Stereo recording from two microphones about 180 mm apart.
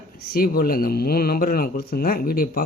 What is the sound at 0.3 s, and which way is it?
Speech, 55° left (ahead or behind).